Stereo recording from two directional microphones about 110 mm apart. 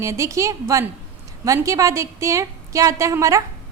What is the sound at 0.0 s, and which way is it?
A woman's voice, 30° right (ahead or behind).